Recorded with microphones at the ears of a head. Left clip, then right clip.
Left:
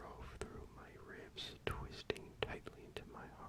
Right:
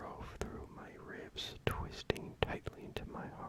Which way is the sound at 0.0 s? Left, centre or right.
Right.